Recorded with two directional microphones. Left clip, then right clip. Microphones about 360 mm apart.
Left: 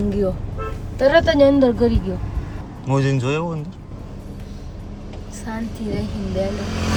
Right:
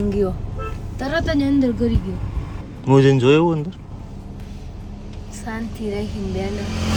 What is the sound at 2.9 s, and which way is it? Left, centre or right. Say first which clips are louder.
Speech: right 8 dB; centre.